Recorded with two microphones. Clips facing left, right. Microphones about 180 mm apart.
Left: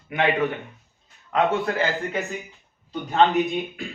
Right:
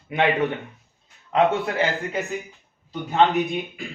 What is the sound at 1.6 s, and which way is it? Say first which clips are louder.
Speech: even; 20° right (ahead or behind).